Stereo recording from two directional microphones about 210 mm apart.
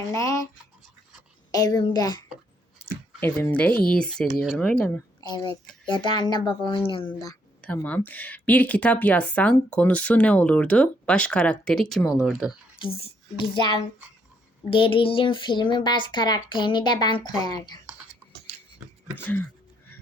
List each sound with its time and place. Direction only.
0.1 s speech: 15° left (ahead or behind)
1.5 s speech: 15° left (ahead or behind)
5.2 s a woman's voice: 20° left (ahead or behind); by 12.5 s centre (ahead or behind)
13.0 s speech: 25° left (ahead or behind)
19.1 s speech: 10° left (ahead or behind)